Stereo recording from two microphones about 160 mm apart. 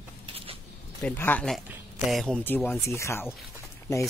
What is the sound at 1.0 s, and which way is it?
Speech, 10° left (ahead or behind).